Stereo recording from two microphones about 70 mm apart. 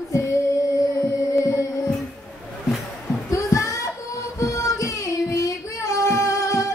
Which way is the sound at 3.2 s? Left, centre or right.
Left.